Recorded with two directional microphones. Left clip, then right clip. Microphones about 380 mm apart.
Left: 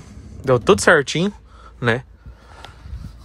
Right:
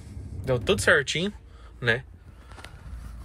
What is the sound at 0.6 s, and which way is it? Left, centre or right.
Speech, centre.